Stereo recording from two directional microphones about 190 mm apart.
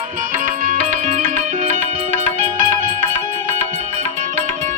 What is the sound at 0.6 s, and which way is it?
Music, 45° right (ahead or behind).